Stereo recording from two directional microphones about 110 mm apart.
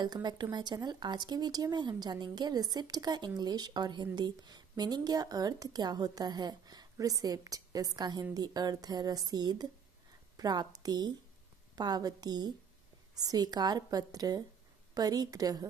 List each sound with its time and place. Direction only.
0.0 s speech: 40° right (ahead or behind)